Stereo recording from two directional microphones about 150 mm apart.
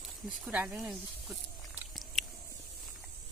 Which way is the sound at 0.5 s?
10° right (ahead or behind).